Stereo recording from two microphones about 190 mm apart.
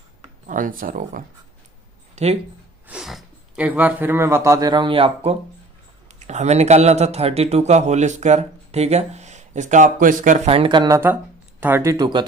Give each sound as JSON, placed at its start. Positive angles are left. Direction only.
{"t": 0.4, "sound": "speech", "side_deg": -45}
{"t": 2.1, "sound": "speech", "side_deg": -35}
{"t": 2.8, "sound": "a man's voice", "side_deg": -5}